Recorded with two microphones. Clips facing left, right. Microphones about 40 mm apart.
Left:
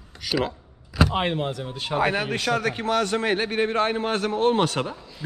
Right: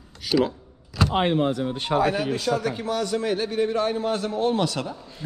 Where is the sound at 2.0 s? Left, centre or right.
Left.